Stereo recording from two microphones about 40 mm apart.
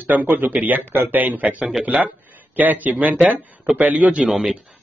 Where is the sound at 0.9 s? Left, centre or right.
Right.